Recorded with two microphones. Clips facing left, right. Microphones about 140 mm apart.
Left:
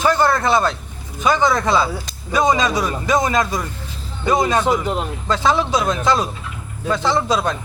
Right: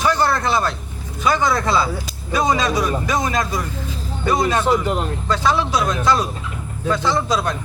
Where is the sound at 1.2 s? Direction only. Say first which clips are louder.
Left 2 dB; 20° left (ahead or behind).